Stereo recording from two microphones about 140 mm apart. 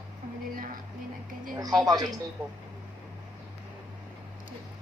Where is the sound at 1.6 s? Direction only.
30° right (ahead or behind).